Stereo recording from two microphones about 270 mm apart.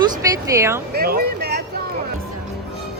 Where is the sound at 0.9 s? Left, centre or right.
Right.